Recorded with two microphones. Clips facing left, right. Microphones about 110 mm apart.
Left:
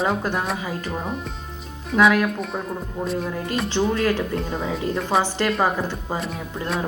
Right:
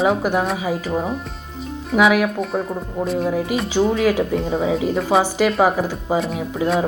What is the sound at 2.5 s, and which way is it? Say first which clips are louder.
Speech: right 6 dB; 15° right (ahead or behind).